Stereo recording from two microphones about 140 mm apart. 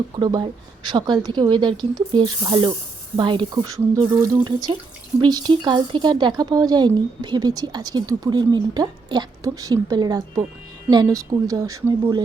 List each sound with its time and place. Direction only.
0.2 s a woman's voice: 30° right (ahead or behind)